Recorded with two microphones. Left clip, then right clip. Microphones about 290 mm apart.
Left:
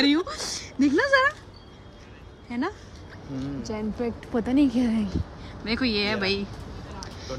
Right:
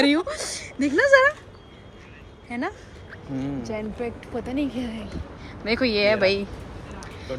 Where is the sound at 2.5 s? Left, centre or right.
Centre.